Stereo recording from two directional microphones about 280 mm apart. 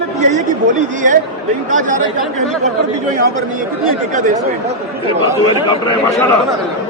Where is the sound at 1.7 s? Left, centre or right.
Right.